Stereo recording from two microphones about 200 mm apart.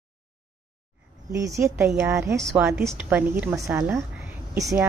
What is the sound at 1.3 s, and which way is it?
A woman's voice, 15° right (ahead or behind).